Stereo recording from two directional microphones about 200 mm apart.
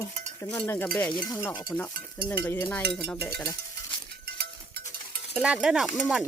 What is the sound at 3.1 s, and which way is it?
Cowbell, 10° left (ahead or behind).